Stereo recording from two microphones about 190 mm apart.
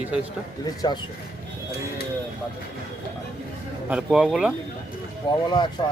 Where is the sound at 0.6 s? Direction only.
20° left (ahead or behind).